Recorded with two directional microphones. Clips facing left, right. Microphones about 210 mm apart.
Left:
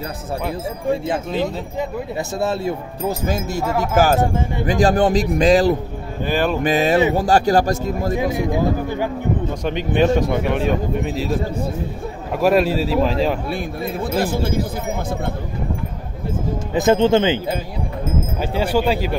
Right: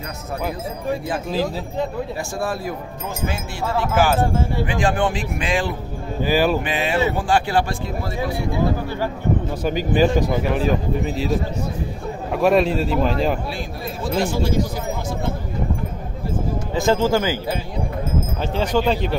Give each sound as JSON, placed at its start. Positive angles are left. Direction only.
{"t": 2.3, "sound": "speech", "side_deg": 25}
{"t": 6.2, "sound": "speech", "side_deg": -5}
{"t": 6.6, "sound": "speech", "side_deg": 40}
{"t": 8.2, "sound": "speech", "side_deg": 20}
{"t": 9.6, "sound": "a man's voice", "side_deg": -5}
{"t": 16.7, "sound": "speech", "side_deg": 20}
{"t": 18.4, "sound": "speech", "side_deg": 10}